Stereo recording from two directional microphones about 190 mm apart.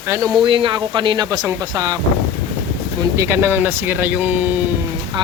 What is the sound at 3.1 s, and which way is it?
Speech, 15° right (ahead or behind).